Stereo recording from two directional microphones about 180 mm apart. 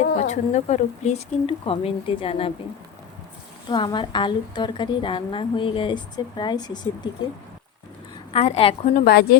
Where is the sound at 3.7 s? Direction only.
25° left (ahead or behind).